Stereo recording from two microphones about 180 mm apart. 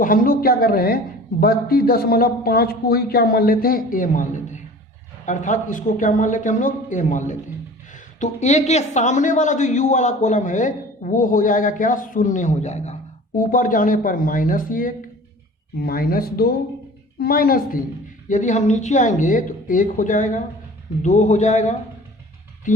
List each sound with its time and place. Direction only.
0.0 s a woman's voice: 50° left (ahead or behind)